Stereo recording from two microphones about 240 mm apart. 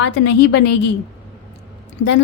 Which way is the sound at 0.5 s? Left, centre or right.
Left.